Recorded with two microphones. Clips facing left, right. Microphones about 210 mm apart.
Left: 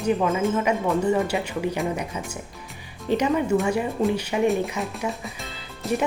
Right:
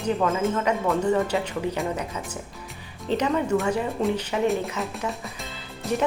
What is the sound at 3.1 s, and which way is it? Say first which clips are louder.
Speech: left 2 dB; 10° left (ahead or behind).